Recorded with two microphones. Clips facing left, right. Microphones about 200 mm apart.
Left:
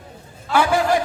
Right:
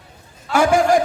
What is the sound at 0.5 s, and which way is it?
Speech, 45° right (ahead or behind).